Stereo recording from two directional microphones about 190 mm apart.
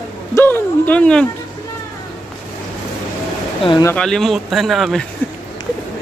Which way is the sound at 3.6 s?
25° left (ahead or behind).